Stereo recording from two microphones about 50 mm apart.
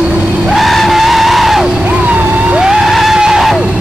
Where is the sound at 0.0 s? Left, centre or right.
Right.